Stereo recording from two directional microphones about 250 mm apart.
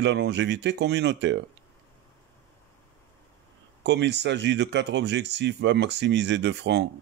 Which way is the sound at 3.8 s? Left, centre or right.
Right.